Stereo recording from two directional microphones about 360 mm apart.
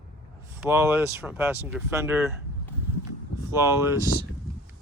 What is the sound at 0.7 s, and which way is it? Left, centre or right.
Speech, centre.